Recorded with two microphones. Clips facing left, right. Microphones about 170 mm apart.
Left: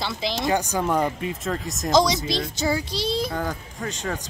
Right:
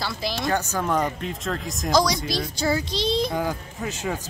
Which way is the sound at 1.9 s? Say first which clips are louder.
Left 2 dB; 25° left (ahead or behind).